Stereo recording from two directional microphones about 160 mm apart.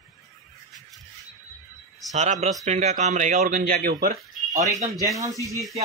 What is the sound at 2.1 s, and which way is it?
Speech, 45° right (ahead or behind).